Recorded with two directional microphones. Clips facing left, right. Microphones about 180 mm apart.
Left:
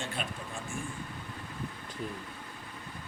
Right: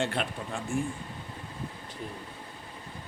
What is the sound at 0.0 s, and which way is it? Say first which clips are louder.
Speech: right 7 dB; 65° right (ahead or behind).